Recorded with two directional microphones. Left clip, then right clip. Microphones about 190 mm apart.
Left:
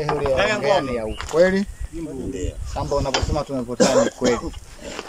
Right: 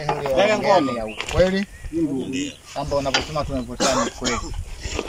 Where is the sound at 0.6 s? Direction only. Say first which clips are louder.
Right 2 dB; 10° left (ahead or behind).